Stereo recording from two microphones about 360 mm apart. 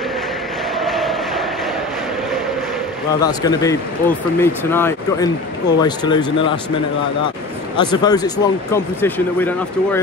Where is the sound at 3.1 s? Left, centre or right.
Centre.